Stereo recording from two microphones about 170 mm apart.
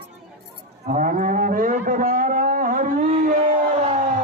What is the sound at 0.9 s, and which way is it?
Livestock, 45° right (ahead or behind).